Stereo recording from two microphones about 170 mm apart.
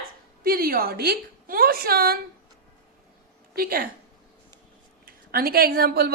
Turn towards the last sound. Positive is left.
turn(degrees=-65)  # may be behind; listen again after turning